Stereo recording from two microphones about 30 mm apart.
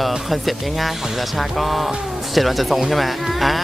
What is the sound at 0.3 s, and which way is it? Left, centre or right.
Speech, centre.